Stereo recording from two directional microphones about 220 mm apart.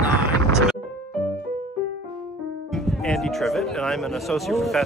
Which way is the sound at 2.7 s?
Centre (ahead or behind).